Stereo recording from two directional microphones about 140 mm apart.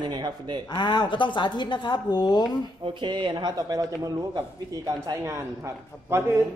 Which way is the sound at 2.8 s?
35° right (ahead or behind).